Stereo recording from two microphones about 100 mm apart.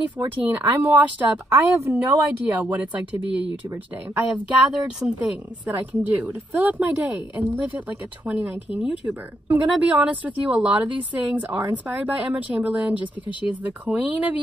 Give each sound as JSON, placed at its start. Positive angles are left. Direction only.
{"t": 0.2, "sound": "speech", "side_deg": -20}
{"t": 1.5, "sound": "speech", "side_deg": -25}
{"t": 2.4, "sound": "speech", "side_deg": -15}